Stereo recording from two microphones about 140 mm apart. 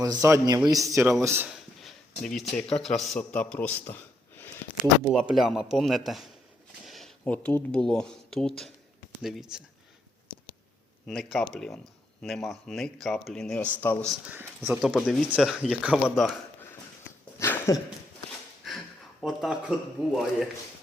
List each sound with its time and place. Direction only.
0.0 s a man's voice: 25° right (ahead or behind)
1.5 s a sound: centre (ahead or behind)
2.7 s speech: centre (ahead or behind)
4.8 s speech: centre (ahead or behind)
11.0 s speech: 5° left (ahead or behind)
14.3 s speech: 15° right (ahead or behind)
14.8 s speech: centre (ahead or behind)
17.4 s a sound: 15° left (ahead or behind)
18.6 s a sound: centre (ahead or behind)
19.2 s speech: centre (ahead or behind)